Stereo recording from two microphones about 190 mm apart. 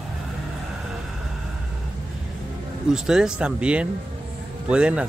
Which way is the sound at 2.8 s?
5° right (ahead or behind).